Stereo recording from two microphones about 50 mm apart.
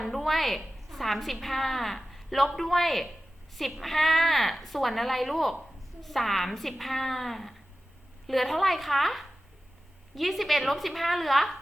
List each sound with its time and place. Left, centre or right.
0.0 s a woman's voice: centre